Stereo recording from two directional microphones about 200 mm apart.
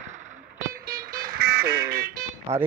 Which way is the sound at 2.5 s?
35° right (ahead or behind).